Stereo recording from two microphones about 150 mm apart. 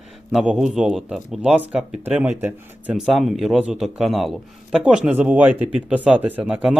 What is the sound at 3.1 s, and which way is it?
A man's voice, centre (ahead or behind).